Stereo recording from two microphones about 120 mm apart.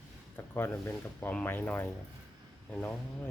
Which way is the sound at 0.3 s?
20° left (ahead or behind).